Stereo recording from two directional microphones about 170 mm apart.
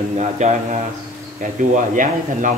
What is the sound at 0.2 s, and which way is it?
Speech, 45° right (ahead or behind).